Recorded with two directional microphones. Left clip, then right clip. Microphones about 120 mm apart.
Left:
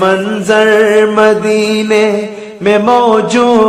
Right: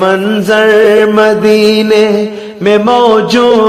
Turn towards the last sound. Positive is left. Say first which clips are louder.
# right 2 dB
turn(degrees=-30)  # may be behind; listen again after turning